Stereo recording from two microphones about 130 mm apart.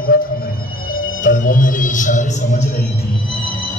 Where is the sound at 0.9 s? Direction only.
90° left; by 2.8 s 70° left (ahead or behind).